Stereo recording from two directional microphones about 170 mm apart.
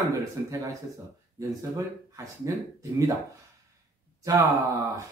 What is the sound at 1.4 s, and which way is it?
Speech, 20° right (ahead or behind).